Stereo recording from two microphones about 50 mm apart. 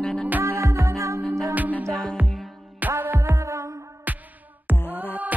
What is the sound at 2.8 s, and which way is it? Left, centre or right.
Music, right.